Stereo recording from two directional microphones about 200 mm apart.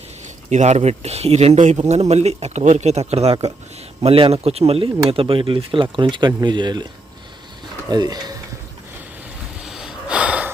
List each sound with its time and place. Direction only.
0.5 s speech: 35° right (ahead or behind)
7.9 s speech: 20° right (ahead or behind)
9.6 s gasp: centre (ahead or behind)